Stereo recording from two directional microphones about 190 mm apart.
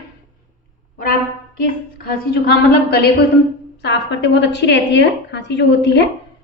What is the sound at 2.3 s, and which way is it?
A woman's voice, 55° left (ahead or behind).